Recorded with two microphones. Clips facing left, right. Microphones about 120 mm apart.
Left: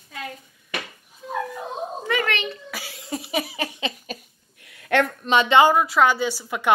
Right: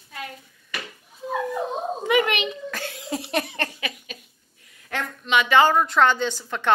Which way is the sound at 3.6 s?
20° left (ahead or behind).